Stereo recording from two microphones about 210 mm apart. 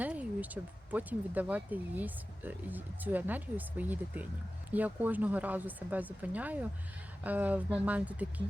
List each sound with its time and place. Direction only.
0.0 s speech: 5° right (ahead or behind)